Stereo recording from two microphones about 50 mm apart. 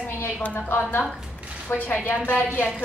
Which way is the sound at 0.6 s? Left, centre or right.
Left.